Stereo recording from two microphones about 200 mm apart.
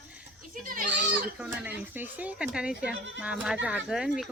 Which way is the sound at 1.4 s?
5° right (ahead or behind).